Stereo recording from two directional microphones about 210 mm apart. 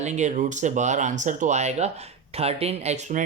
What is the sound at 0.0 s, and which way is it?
Speech, 35° right (ahead or behind).